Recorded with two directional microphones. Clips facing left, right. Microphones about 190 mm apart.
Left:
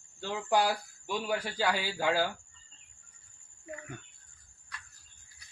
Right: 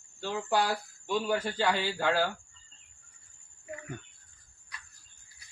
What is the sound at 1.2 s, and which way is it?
A man's voice, 10° left (ahead or behind).